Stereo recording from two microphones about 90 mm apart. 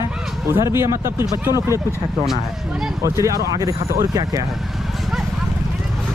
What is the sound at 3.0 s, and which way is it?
Speech, 35° right (ahead or behind).